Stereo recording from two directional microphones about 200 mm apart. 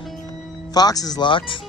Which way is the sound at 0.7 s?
20° left (ahead or behind).